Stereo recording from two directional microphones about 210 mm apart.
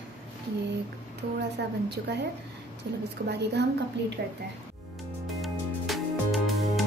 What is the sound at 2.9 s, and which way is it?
A woman's voice, 50° right (ahead or behind).